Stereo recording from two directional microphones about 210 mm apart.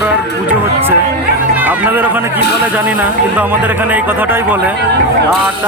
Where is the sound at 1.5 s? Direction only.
10° right (ahead or behind).